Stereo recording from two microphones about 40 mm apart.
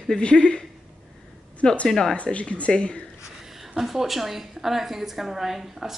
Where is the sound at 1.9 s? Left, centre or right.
Centre.